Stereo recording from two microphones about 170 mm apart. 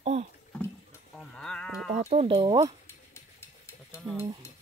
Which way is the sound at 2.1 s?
35° right (ahead or behind).